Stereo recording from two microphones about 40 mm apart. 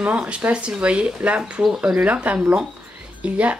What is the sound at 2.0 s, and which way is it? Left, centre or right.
Speech, right.